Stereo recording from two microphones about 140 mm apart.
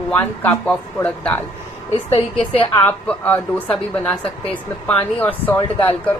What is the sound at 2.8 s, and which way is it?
A woman's voice, 15° left (ahead or behind).